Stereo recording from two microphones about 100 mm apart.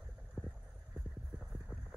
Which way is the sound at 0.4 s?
5° left (ahead or behind).